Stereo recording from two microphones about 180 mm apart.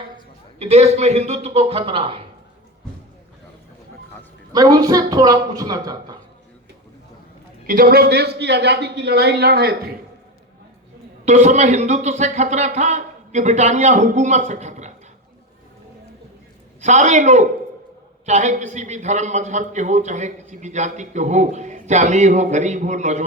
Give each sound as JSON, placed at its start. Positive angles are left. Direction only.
{"t": 0.6, "sound": "a man's voice", "side_deg": -35}
{"t": 4.5, "sound": "speech", "side_deg": -20}
{"t": 7.7, "sound": "a man's voice", "side_deg": -55}
{"t": 11.3, "sound": "a man's voice", "side_deg": -40}
{"t": 16.8, "sound": "a man's voice", "side_deg": -40}